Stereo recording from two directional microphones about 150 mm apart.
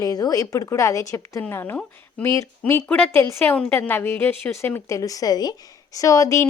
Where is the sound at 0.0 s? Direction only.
25° left (ahead or behind).